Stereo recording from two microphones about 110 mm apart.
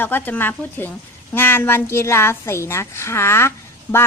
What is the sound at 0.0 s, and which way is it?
A woman's voice, 20° left (ahead or behind).